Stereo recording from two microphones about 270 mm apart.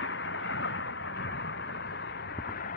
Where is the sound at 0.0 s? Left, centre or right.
Left.